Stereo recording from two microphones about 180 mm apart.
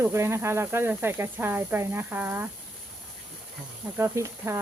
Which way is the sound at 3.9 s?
15° right (ahead or behind).